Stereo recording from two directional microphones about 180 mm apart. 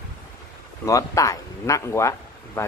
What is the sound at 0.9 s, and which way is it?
Speech, 20° left (ahead or behind).